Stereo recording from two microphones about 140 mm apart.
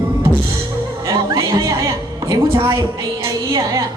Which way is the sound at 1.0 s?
25° right (ahead or behind).